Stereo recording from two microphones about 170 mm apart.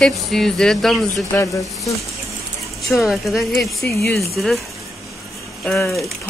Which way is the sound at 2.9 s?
Centre (ahead or behind).